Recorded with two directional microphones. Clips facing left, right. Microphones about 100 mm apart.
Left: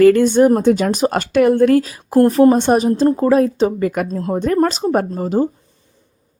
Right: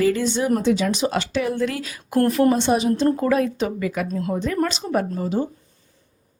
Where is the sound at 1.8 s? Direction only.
35° left (ahead or behind).